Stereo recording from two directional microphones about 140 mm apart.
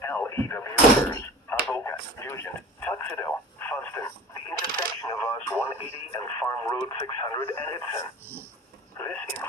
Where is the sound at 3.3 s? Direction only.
10° left (ahead or behind).